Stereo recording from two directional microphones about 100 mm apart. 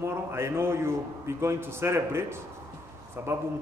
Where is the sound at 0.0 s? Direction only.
25° right (ahead or behind).